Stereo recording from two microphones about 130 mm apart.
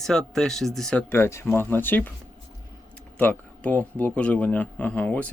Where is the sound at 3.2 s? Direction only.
10° left (ahead or behind).